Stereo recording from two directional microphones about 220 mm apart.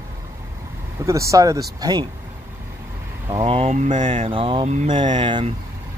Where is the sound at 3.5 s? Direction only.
30° right (ahead or behind).